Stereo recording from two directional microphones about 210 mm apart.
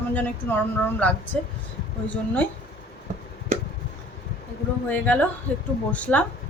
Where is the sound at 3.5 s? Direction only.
35° right (ahead or behind).